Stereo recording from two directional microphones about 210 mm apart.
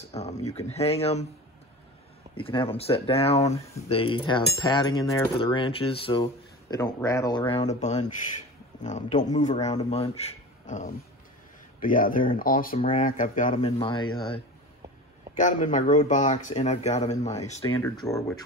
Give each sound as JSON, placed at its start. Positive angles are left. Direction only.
{"t": 0.1, "sound": "speech", "side_deg": 30}
{"t": 2.3, "sound": "cutlery", "side_deg": 25}
{"t": 6.7, "sound": "cutlery", "side_deg": 15}
{"t": 8.8, "sound": "speech", "side_deg": 35}
{"t": 11.8, "sound": "speech", "side_deg": 40}
{"t": 13.6, "sound": "cutlery", "side_deg": 25}
{"t": 15.3, "sound": "speech", "side_deg": 35}
{"t": 17.6, "sound": "speech", "side_deg": 15}